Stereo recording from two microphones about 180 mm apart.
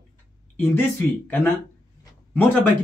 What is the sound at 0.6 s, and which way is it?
A man's voice, 10° left (ahead or behind).